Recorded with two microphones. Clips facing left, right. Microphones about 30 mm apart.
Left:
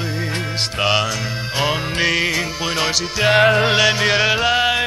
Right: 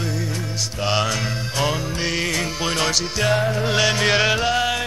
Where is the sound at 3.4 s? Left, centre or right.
Left.